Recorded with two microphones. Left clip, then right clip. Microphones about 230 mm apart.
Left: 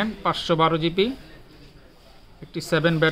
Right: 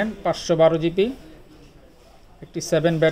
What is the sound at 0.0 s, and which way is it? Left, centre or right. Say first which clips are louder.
Speech: right 1 dB; centre.